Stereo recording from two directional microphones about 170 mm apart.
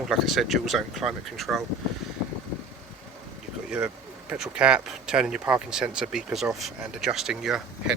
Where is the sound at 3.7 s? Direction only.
5° right (ahead or behind).